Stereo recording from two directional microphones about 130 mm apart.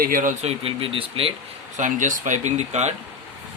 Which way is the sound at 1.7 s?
75° right (ahead or behind).